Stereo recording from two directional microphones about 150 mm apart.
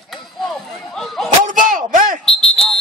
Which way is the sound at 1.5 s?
65° right (ahead or behind).